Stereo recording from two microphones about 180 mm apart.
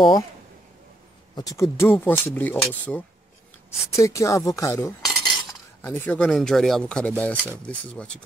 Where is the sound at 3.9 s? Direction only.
15° left (ahead or behind).